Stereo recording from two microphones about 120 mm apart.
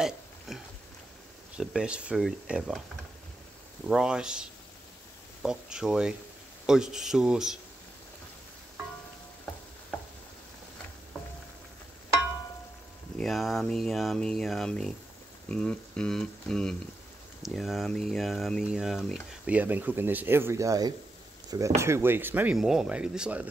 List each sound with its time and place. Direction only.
0.5 s a sound: centre (ahead or behind)
1.6 s speech: 5° right (ahead or behind)
3.8 s speech: 5° right (ahead or behind)
13.2 s speech: centre (ahead or behind)
19.4 s speech: 15° right (ahead or behind)
22.6 s speech: 5° right (ahead or behind)